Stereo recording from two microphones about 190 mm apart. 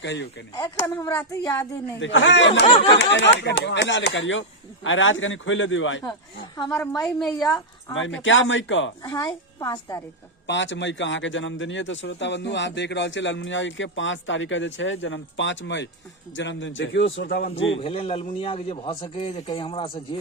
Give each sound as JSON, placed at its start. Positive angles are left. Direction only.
{"t": 0.0, "sound": "a man's voice", "side_deg": 70}
{"t": 0.5, "sound": "speech", "side_deg": 15}
{"t": 2.0, "sound": "a man's voice", "side_deg": 80}
{"t": 7.0, "sound": "a woman's voice", "side_deg": 0}
{"t": 7.9, "sound": "speech", "side_deg": 85}
{"t": 9.0, "sound": "a man's voice", "side_deg": 20}
{"t": 10.4, "sound": "a man's voice", "side_deg": 70}
{"t": 17.7, "sound": "a man's voice", "side_deg": 30}